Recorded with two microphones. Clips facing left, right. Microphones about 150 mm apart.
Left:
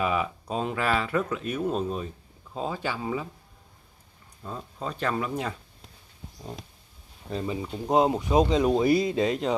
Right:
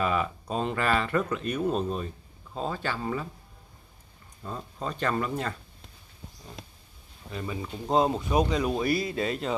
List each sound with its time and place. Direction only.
0.0 s speech: 5° left (ahead or behind)
4.4 s speech: centre (ahead or behind)
7.3 s speech: 35° left (ahead or behind)
7.8 s speech: 20° left (ahead or behind)